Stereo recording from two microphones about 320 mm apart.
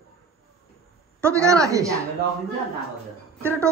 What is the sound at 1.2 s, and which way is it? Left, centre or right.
Speech, centre.